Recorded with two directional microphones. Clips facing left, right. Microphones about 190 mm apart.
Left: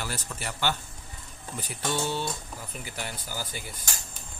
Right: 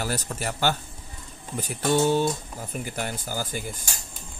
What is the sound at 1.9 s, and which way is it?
Speech, 45° right (ahead or behind).